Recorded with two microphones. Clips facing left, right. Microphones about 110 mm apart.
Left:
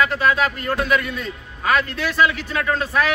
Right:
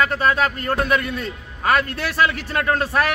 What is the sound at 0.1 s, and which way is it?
A man's voice, 40° right (ahead or behind).